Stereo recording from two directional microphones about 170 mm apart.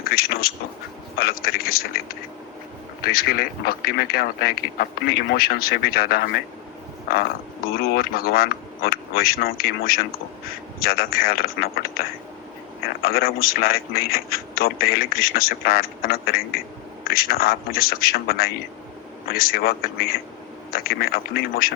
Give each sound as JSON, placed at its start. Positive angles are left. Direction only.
{"t": 0.0, "sound": "quack", "side_deg": 60}
{"t": 1.1, "sound": "a man's voice", "side_deg": 60}